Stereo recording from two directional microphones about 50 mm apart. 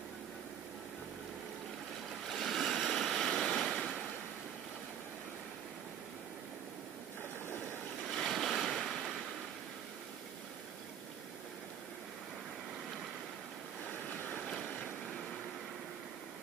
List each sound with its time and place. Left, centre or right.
2.2 s waves: centre
3.5 s a sound: centre
7.4 s a sound: left
8.0 s waves: centre
13.8 s vehicle: centre
14.4 s vehicle: centre